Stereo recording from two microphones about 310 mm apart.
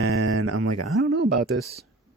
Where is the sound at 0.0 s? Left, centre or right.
Right.